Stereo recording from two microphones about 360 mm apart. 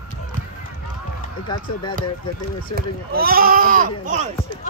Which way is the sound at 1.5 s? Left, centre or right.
Centre.